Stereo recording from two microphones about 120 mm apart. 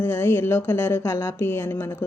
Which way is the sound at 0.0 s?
20° left (ahead or behind).